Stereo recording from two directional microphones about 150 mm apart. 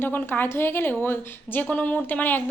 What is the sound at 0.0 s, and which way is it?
A woman's voice, 15° left (ahead or behind).